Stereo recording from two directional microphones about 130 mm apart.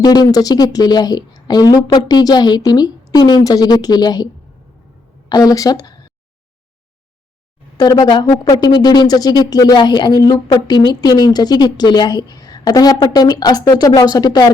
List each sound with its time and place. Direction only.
0.0 s speech: 30° left (ahead or behind)
5.3 s speech: 30° left (ahead or behind)
7.8 s speech: 30° left (ahead or behind)